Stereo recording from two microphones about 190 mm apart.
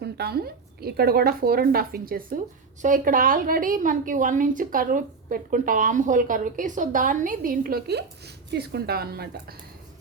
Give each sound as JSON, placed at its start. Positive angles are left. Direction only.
{"t": 0.0, "sound": "a woman's voice", "side_deg": -55}